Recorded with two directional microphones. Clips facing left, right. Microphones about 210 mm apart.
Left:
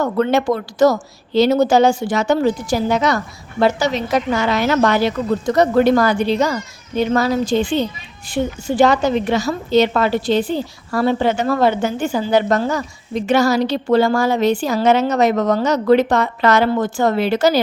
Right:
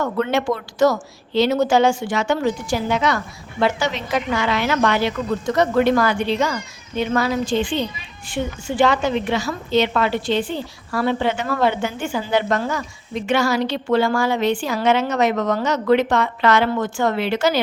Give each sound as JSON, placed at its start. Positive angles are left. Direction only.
{"t": 0.0, "sound": "a woman's voice", "side_deg": 40}